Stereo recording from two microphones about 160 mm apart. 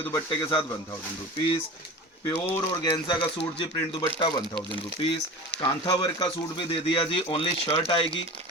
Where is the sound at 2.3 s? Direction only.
15° left (ahead or behind).